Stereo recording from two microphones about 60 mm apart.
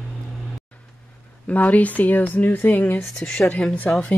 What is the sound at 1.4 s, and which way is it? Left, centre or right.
Speech, left.